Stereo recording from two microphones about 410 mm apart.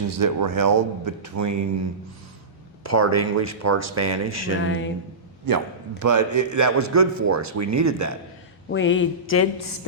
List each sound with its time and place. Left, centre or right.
0.1 s speech: right
2.8 s speech: right
4.6 s speech: left
5.5 s a man's voice: right
8.7 s speech: left